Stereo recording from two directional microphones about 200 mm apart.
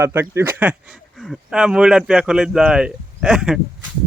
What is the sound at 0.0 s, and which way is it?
Speech, 10° right (ahead or behind).